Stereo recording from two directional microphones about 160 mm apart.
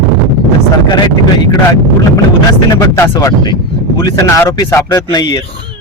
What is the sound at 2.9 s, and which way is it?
A man's voice, 20° left (ahead or behind).